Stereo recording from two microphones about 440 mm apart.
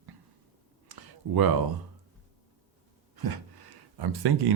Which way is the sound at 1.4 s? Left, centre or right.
Right.